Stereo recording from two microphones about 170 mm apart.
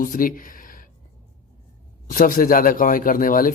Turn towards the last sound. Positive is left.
turn(degrees=55)  # may be behind; listen again after turning